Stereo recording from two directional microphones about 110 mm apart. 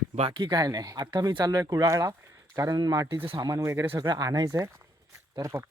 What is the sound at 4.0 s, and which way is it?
Speech, 35° right (ahead or behind).